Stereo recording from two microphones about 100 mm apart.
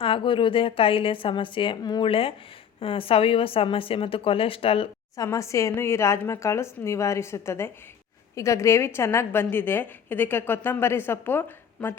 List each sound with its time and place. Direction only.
0.0 s a woman's voice: 60° left (ahead or behind)
2.0 s a woman's voice: 65° left (ahead or behind)
5.1 s a woman's voice: 35° left (ahead or behind)